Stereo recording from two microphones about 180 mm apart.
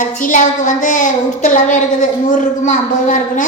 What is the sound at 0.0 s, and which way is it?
A woman's voice, 45° left (ahead or behind).